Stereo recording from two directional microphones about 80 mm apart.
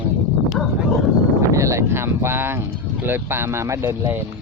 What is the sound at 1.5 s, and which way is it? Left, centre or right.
Speech, right.